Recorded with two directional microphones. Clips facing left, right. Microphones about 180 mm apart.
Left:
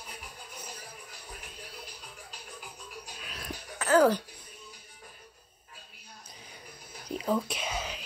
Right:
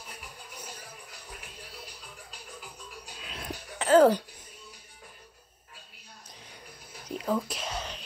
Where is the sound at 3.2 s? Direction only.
25° right (ahead or behind).